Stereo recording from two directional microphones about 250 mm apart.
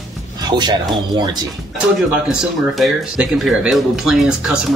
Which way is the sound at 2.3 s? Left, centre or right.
Centre.